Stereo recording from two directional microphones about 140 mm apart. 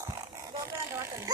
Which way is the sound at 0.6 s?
20° right (ahead or behind).